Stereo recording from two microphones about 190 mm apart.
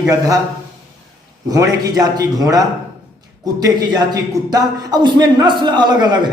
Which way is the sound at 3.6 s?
20° right (ahead or behind).